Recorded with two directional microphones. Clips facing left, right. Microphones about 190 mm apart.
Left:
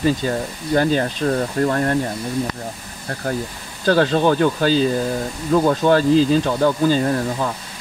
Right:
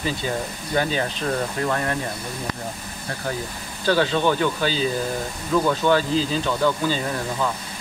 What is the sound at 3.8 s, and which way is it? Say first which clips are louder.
Speech: left 4 dB; 45° left (ahead or behind).